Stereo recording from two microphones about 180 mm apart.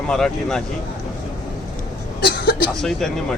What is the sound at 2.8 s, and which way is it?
Speech, 5° left (ahead or behind).